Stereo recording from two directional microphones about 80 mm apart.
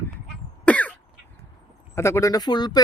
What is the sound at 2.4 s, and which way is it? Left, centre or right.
Speech, left.